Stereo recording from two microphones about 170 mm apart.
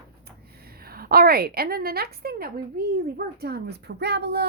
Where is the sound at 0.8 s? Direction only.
60° right (ahead or behind); by 4.5 s 75° right (ahead or behind).